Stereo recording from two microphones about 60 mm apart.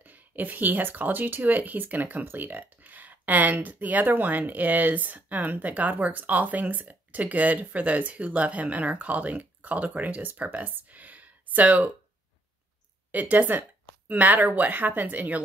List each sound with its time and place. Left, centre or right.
0.0 s speech: right
13.1 s speech: right